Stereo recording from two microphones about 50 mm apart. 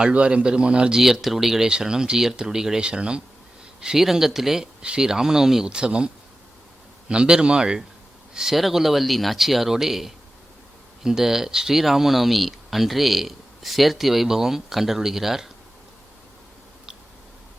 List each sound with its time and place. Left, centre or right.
0.0 s speech: right
1.0 s speech: centre
7.1 s speech: centre
8.4 s speech: centre